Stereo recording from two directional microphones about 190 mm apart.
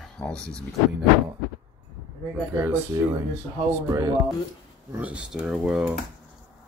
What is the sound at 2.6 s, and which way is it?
Speech, 15° right (ahead or behind).